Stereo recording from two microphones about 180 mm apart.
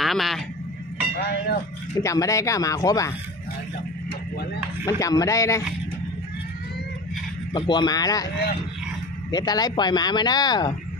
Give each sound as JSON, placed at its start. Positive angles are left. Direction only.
{"t": 0.0, "sound": "speech", "side_deg": 0}
{"t": 1.1, "sound": "vehicle", "side_deg": 65}
{"t": 2.0, "sound": "speech", "side_deg": 20}
{"t": 4.8, "sound": "speech", "side_deg": 20}
{"t": 7.5, "sound": "speech", "side_deg": 25}
{"t": 9.3, "sound": "speech", "side_deg": 20}